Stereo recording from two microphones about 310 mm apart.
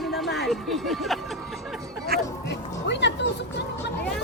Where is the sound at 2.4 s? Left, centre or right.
Left.